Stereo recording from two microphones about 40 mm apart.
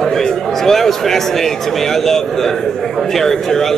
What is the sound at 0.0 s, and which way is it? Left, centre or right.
A man's voice, centre.